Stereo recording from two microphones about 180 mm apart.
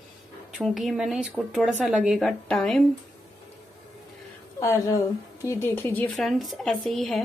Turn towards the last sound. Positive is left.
turn(degrees=0)  # may be behind; listen again after turning